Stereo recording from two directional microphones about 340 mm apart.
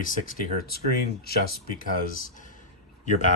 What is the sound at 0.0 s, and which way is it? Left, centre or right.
Speech, left.